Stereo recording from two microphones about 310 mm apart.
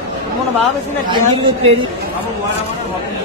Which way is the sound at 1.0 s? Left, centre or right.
Centre.